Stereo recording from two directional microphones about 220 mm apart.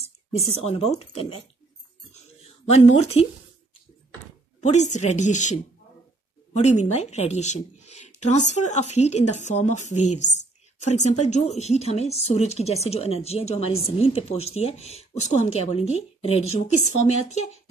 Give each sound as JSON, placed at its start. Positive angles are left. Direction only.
{"t": 0.5, "sound": "a woman's voice", "side_deg": 30}
{"t": 2.7, "sound": "a woman's voice", "side_deg": 30}
{"t": 4.6, "sound": "a woman's voice", "side_deg": 30}